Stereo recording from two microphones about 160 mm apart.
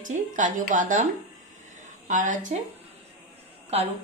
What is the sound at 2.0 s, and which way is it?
Speech, 50° right (ahead or behind).